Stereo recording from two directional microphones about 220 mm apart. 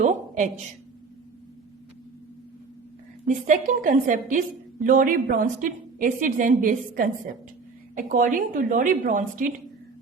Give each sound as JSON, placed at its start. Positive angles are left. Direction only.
{"t": 0.0, "sound": "a woman's voice", "side_deg": -35}
{"t": 3.2, "sound": "a woman's voice", "side_deg": -35}